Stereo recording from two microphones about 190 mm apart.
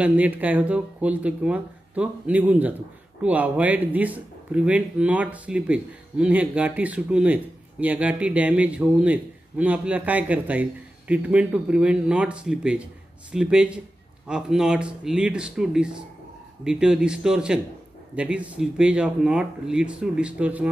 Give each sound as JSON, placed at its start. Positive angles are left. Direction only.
{"t": 0.0, "sound": "a man's voice", "side_deg": -10}